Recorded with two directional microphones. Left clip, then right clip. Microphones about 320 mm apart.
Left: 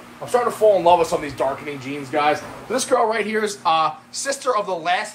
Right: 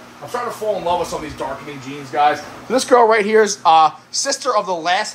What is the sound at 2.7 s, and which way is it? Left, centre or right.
Speech, right.